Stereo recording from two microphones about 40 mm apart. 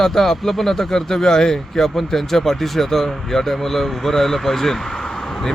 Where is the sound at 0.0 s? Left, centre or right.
Centre.